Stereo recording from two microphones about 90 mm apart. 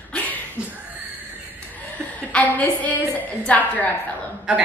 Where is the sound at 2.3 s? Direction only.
15° left (ahead or behind).